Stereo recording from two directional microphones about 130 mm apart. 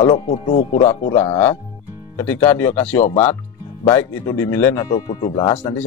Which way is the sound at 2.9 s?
60° left (ahead or behind).